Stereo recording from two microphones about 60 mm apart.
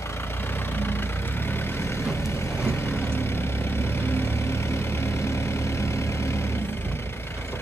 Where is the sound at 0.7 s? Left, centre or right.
Left.